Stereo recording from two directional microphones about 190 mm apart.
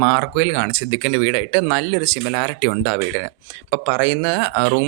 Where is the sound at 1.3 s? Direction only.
30° right (ahead or behind).